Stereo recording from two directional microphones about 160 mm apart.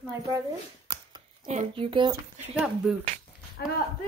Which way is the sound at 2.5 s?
5° right (ahead or behind).